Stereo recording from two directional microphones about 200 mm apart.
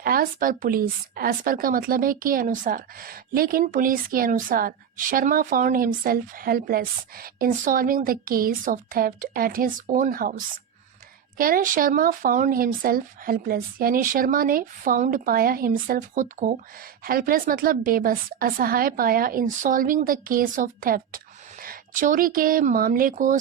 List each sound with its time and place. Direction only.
0.0 s a woman's voice: 45° right (ahead or behind)
11.3 s a woman's voice: 45° right (ahead or behind)